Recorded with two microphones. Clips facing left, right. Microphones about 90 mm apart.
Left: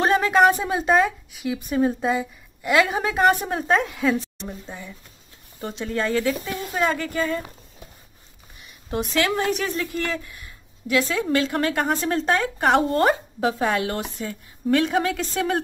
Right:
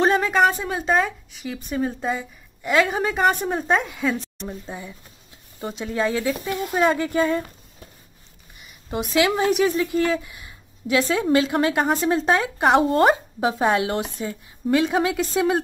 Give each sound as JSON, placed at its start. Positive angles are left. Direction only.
{"t": 0.0, "sound": "a woman's voice", "side_deg": 0}
{"t": 4.6, "sound": "speech", "side_deg": -10}
{"t": 8.5, "sound": "a sound", "side_deg": 0}
{"t": 9.1, "sound": "speech", "side_deg": -10}
{"t": 14.7, "sound": "speech", "side_deg": -5}